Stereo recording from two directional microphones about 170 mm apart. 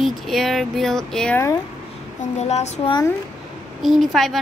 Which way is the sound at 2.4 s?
40° left (ahead or behind).